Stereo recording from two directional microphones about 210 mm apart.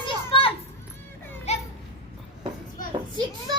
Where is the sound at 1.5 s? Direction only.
30° left (ahead or behind).